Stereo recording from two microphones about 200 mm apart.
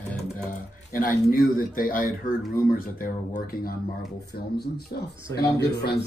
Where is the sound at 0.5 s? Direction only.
45° left (ahead or behind).